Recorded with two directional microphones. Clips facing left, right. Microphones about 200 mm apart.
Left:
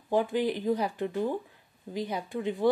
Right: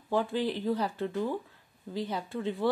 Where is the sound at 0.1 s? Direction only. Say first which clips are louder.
Left 2 dB; 15° left (ahead or behind).